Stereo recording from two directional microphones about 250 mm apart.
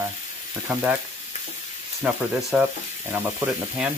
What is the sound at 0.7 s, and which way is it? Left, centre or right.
Frying, centre.